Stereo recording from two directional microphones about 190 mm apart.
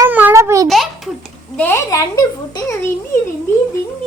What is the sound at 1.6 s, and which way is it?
A woman's voice, 10° left (ahead or behind).